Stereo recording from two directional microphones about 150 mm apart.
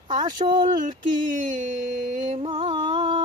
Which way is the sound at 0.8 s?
60° right (ahead or behind).